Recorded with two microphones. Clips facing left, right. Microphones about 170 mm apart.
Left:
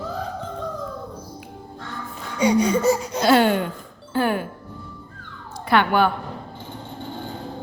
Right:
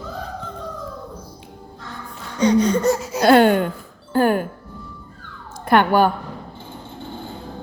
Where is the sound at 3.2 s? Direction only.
50° right (ahead or behind).